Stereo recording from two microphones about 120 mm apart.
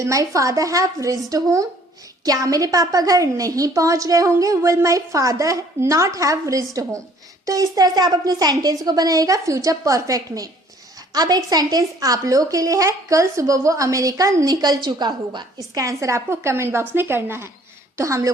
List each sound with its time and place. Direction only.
0.0 s a woman's voice: 25° right (ahead or behind)